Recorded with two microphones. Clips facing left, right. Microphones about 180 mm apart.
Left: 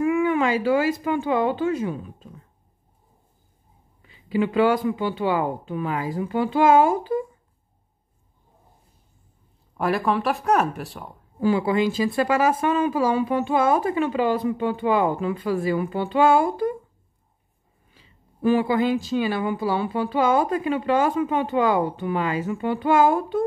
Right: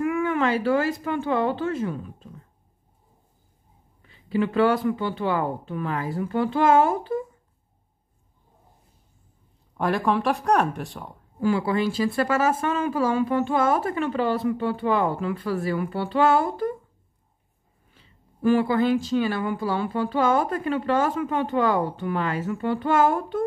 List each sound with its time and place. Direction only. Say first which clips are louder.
0.0 s speech: left 3 dB; 15° left (ahead or behind)
4.0 s speech: left 1 dB; 10° left (ahead or behind)
9.8 s speech: even; 5° left (ahead or behind)
11.3 s speech: left 2 dB; 20° left (ahead or behind)
17.9 s speech: left 1 dB; 15° left (ahead or behind)